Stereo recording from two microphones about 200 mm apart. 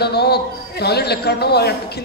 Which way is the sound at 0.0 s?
55° left (ahead or behind).